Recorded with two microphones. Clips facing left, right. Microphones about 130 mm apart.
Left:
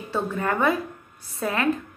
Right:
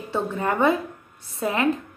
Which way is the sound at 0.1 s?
20° right (ahead or behind).